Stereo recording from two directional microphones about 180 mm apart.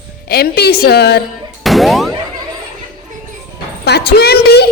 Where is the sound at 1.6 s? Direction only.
Centre (ahead or behind).